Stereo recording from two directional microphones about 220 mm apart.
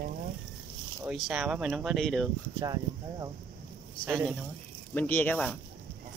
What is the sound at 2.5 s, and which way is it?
Speech, 15° right (ahead or behind).